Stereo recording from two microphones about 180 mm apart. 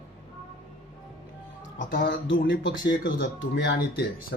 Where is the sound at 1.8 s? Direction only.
50° left (ahead or behind).